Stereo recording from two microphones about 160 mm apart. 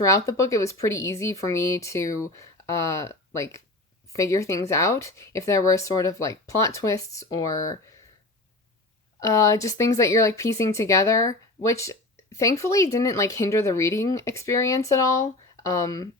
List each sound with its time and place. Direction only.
0.0 s speech: 20° left (ahead or behind)
9.2 s speech: 20° left (ahead or behind)